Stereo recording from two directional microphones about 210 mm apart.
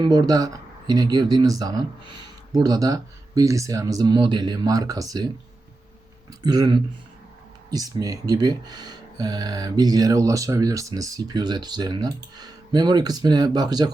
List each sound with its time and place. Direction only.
0.0 s speech: 20° right (ahead or behind)
6.4 s speech: 20° right (ahead or behind)